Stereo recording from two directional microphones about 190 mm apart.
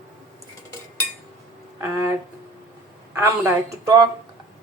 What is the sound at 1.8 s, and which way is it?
Speech, 15° right (ahead or behind).